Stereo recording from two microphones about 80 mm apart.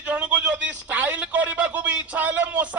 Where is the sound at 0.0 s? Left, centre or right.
Centre.